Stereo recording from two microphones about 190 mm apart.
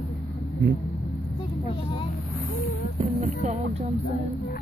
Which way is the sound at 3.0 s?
40° right (ahead or behind).